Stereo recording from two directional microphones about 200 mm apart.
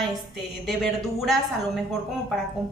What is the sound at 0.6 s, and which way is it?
Speech, centre (ahead or behind).